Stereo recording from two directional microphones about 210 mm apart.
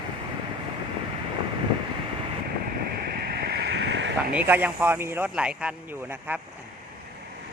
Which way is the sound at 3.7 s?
55° right (ahead or behind).